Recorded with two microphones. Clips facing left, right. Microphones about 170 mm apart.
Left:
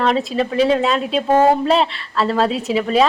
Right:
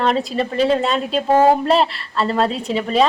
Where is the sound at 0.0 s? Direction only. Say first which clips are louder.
Left 1 dB; centre (ahead or behind).